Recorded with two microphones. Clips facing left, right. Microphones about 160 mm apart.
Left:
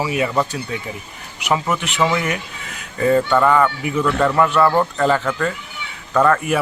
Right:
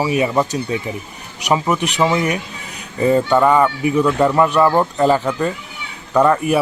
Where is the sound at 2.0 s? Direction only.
20° right (ahead or behind).